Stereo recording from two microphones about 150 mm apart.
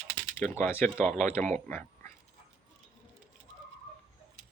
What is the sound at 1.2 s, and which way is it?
Speech, 50° right (ahead or behind).